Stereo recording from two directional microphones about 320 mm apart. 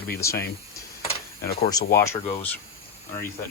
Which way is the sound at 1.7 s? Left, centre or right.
Centre.